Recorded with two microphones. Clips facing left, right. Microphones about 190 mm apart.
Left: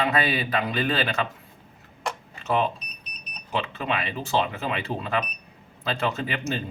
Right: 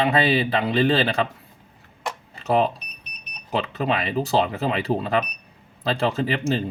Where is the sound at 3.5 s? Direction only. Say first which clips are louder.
Right 4 dB; 35° right (ahead or behind).